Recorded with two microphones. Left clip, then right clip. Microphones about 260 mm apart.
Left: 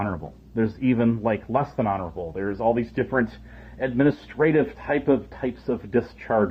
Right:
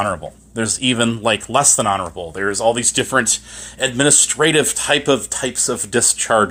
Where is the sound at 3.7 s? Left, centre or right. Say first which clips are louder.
Right 7 dB; centre.